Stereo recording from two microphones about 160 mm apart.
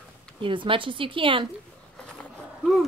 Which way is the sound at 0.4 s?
30° right (ahead or behind).